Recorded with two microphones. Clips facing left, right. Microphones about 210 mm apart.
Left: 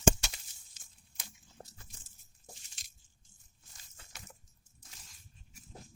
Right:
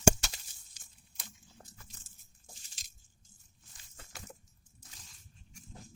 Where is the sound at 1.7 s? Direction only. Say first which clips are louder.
Right 1 dB; 30° left (ahead or behind).